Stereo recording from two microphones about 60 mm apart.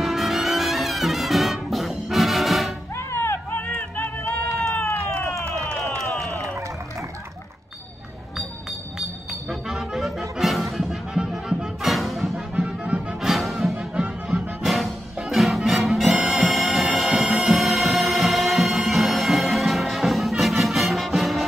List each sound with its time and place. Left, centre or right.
0.0 s music: centre
3.0 s music: left
3.5 s a sound: left
9.3 s music: centre
12.5 s music: right
13.2 s music: centre
14.2 s music: centre
14.6 s music: centre